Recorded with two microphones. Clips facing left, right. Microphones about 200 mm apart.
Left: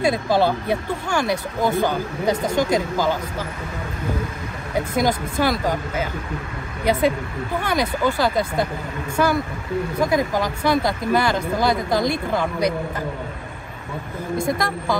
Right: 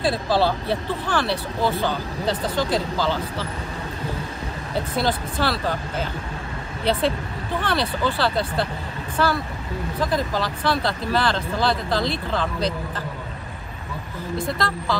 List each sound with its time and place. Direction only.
0.0 s speech: 15° left (ahead or behind)
4.7 s speech: 15° left (ahead or behind)
14.3 s speech: 50° left (ahead or behind)